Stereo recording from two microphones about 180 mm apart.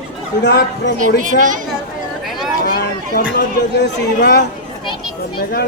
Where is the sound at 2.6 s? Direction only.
55° left (ahead or behind).